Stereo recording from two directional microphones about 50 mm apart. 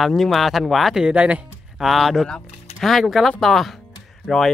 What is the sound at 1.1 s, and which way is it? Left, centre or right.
Speech, right.